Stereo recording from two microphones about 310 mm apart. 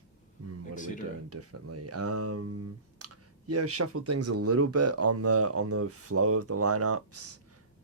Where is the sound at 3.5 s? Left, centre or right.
Right.